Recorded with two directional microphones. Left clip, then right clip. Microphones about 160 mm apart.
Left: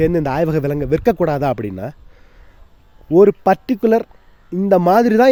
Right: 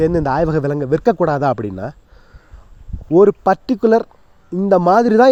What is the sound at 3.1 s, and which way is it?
Speech, 15° left (ahead or behind).